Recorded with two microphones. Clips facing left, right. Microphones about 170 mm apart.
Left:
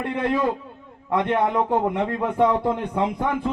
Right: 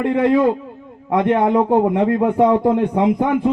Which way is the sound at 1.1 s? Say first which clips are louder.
Right 6 dB; 20° right (ahead or behind).